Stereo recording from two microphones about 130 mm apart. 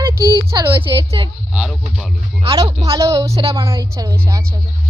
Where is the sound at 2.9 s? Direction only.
25° right (ahead or behind).